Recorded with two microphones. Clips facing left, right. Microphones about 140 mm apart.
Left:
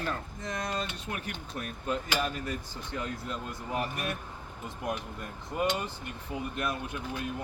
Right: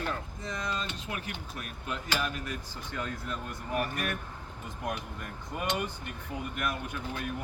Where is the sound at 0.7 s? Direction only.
40° left (ahead or behind).